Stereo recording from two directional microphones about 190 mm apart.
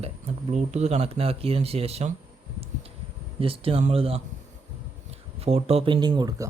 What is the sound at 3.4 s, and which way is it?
Speech, 30° right (ahead or behind).